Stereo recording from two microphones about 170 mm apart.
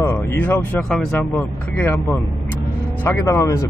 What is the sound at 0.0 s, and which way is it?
Speech, 10° left (ahead or behind).